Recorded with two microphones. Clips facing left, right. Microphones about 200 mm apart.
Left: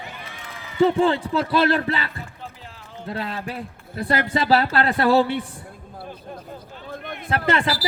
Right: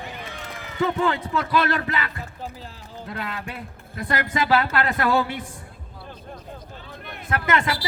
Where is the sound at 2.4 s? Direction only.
35° right (ahead or behind).